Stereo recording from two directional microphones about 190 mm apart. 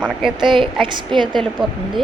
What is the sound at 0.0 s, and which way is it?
Speech, 5° right (ahead or behind).